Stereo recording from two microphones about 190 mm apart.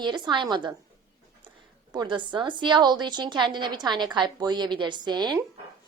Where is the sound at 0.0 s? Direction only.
25° right (ahead or behind).